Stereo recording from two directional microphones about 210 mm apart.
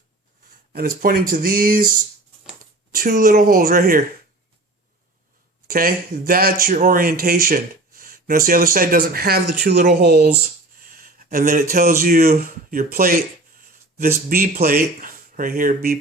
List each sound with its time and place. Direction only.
0.7 s speech: 45° right (ahead or behind)
5.6 s speech: 45° right (ahead or behind)
11.3 s speech: 40° right (ahead or behind)
14.4 s speech: 45° right (ahead or behind)
15.0 s a sound: 40° right (ahead or behind)